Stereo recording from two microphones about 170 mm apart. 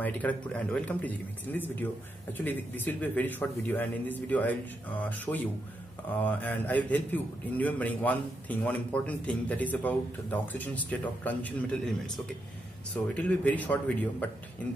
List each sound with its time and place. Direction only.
0.0 s a man's voice: 10° left (ahead or behind)
12.9 s a man's voice: 10° left (ahead or behind)